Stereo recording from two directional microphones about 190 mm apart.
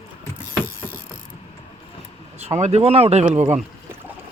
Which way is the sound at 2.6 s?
35° right (ahead or behind).